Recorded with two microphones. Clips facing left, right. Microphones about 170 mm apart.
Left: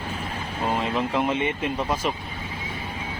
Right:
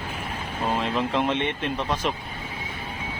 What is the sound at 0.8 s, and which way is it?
Speech, 5° left (ahead or behind).